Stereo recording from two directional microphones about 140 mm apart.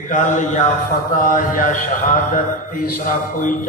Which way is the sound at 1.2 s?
80° left.